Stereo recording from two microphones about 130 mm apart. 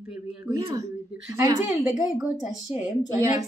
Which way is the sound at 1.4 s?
25° right (ahead or behind).